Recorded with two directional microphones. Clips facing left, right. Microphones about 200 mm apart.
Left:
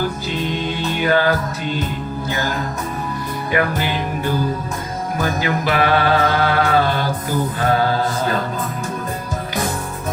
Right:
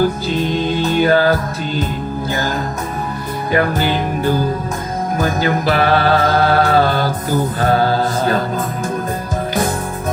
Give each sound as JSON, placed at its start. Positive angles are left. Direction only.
{"t": 0.9, "sound": "music", "side_deg": -35}
{"t": 3.5, "sound": "music", "side_deg": -35}